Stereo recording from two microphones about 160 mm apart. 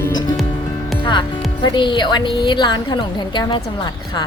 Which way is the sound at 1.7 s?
30° left (ahead or behind).